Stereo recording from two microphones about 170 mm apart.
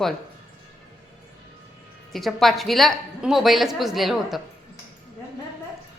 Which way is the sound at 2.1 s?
Centre (ahead or behind).